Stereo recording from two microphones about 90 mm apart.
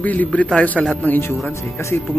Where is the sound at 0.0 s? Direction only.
15° left (ahead or behind).